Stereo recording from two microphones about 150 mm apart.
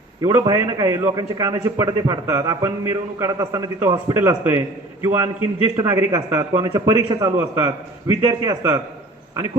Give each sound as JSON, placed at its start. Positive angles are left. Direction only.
{"t": 0.2, "sound": "a man's voice", "side_deg": -25}